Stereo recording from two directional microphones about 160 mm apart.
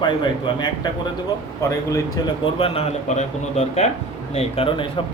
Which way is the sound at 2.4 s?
35° left (ahead or behind).